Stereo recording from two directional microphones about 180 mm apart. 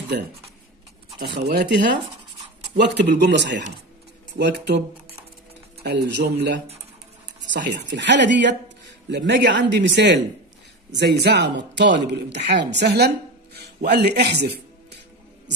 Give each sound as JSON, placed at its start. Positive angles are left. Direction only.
{"t": 1.2, "sound": "speech", "side_deg": -70}
{"t": 7.5, "sound": "speech", "side_deg": -75}
{"t": 12.8, "sound": "a sound", "side_deg": -65}
{"t": 13.8, "sound": "speech", "side_deg": -65}